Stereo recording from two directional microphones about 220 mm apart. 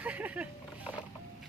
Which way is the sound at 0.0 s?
5° right (ahead or behind).